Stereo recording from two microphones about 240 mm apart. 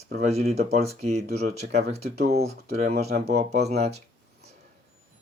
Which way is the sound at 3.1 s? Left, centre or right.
Right.